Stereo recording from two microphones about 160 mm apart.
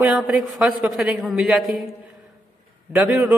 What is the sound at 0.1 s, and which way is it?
A woman's voice, centre (ahead or behind).